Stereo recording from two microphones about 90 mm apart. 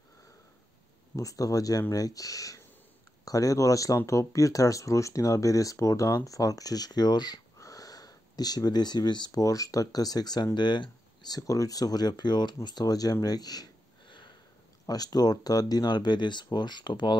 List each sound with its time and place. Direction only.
1.1 s speech: 40° left (ahead or behind)
14.0 s sniff: 60° left (ahead or behind)
14.9 s speech: 45° left (ahead or behind)